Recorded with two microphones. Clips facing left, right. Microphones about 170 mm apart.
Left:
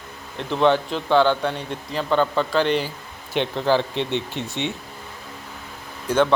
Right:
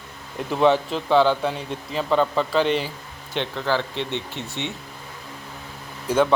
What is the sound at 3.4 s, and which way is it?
Speech, 15° left (ahead or behind).